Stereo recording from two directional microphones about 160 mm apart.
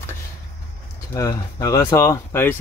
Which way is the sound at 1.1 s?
20° left (ahead or behind).